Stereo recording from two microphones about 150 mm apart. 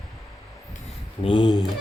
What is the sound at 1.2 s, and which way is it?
Speech, 30° left (ahead or behind).